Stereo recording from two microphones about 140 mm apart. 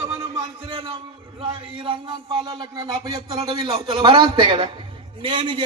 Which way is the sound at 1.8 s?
35° right (ahead or behind).